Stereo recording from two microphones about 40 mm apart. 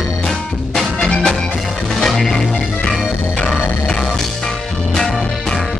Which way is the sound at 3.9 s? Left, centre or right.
Centre.